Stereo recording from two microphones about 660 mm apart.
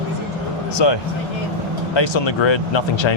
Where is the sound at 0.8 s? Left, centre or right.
Left.